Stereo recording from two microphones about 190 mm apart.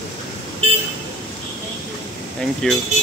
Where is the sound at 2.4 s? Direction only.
Centre (ahead or behind).